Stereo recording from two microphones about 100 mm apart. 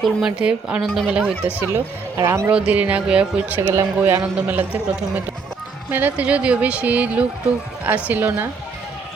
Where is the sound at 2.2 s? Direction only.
30° right (ahead or behind).